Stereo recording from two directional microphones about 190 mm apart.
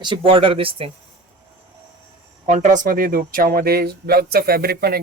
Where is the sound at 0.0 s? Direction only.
25° right (ahead or behind).